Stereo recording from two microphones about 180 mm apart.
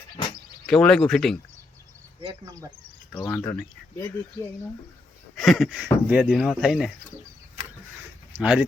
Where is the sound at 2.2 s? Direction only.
20° right (ahead or behind).